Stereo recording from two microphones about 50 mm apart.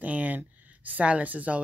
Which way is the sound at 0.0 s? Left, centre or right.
Right.